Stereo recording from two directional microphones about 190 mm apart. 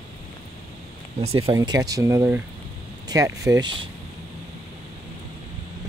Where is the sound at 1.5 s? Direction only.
20° right (ahead or behind).